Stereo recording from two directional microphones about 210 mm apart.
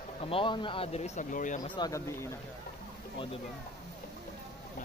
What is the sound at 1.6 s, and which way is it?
Speech, 20° left (ahead or behind).